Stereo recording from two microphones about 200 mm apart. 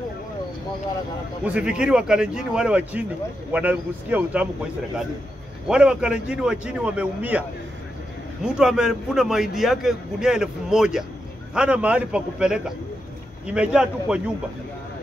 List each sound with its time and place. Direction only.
1.4 s a man's voice: 5° right (ahead or behind)
5.7 s a man's voice: 5° right (ahead or behind)
8.5 s a man's voice: 5° right (ahead or behind)